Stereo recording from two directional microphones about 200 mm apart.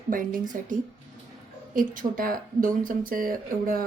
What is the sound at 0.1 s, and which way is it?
Speech, 45° right (ahead or behind).